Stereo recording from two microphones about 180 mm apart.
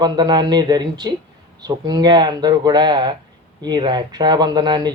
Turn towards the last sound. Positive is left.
turn(degrees=-25)  # may be behind; listen again after turning